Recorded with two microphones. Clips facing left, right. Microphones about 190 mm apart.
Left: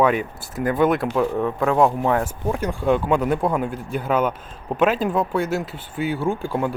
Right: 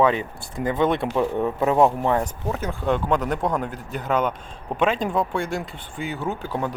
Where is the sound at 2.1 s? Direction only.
10° left (ahead or behind).